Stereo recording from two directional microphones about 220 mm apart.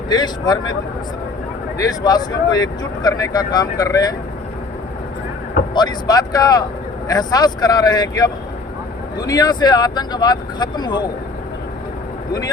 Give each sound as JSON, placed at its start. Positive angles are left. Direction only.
{"t": 0.1, "sound": "speech", "side_deg": 20}
{"t": 1.8, "sound": "speech", "side_deg": 15}
{"t": 5.7, "sound": "speech", "side_deg": 20}